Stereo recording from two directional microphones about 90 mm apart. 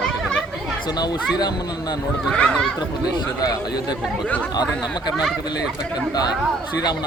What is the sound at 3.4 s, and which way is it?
Speech, 45° left (ahead or behind).